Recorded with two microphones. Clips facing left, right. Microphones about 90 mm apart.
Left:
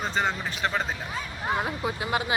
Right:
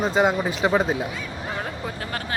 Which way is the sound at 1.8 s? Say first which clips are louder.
Left 3 dB; 15° left (ahead or behind).